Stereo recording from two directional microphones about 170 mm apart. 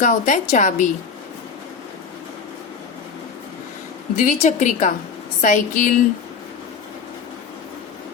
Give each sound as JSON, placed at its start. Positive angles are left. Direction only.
{"t": 0.0, "sound": "a woman's voice", "side_deg": 50}
{"t": 4.1, "sound": "a woman's voice", "side_deg": 50}